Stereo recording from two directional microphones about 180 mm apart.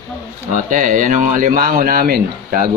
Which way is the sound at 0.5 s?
45° right (ahead or behind).